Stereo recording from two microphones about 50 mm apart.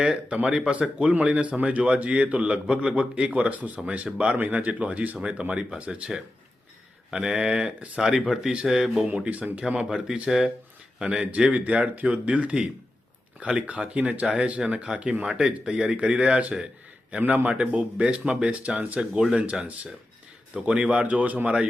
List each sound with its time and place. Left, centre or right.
0.0 s a man's voice: right
4.4 s a man's voice: right
7.1 s speech: centre
9.2 s a man's voice: right
9.6 s a man's voice: centre
20.6 s speech: centre
21.0 s a man's voice: right